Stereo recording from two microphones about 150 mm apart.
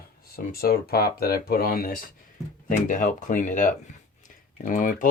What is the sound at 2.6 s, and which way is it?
Speech, 60° left (ahead or behind).